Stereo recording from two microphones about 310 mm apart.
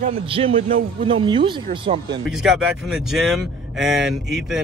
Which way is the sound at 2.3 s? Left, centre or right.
Centre.